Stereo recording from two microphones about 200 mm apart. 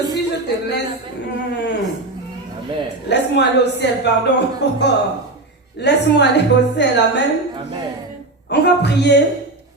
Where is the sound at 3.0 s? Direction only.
60° left (ahead or behind).